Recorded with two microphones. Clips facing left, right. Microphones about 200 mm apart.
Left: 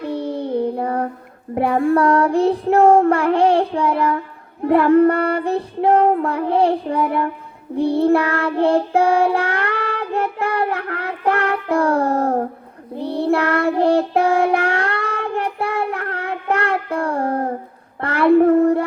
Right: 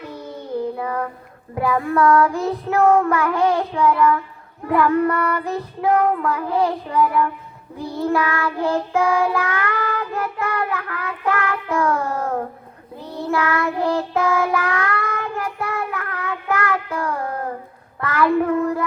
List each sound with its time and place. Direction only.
0.0 s child singing: 30° left (ahead or behind)
18.6 s music: 30° left (ahead or behind)